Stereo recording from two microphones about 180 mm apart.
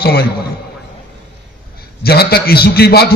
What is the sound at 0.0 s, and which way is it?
Speech, 60° left (ahead or behind).